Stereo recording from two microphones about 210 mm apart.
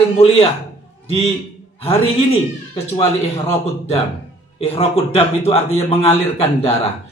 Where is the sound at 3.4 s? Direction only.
30° left (ahead or behind).